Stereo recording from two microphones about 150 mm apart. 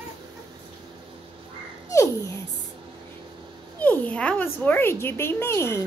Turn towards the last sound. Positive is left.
turn(degrees=15)  # may be behind; listen again after turning